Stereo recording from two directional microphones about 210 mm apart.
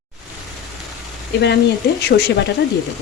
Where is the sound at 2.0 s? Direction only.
50° left (ahead or behind).